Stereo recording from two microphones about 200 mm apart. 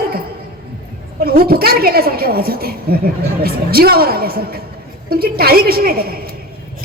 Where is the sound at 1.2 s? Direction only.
50° right (ahead or behind).